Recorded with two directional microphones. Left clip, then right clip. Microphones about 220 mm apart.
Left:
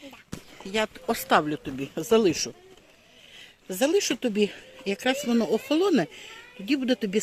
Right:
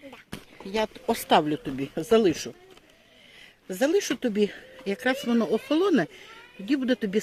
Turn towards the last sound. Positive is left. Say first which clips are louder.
# even
turn(degrees=5)  # may be behind; listen again after turning